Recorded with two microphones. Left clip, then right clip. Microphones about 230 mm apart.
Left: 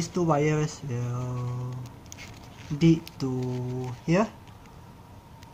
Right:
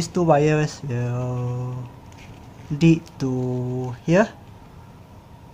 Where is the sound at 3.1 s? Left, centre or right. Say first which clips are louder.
Right 5 dB; right.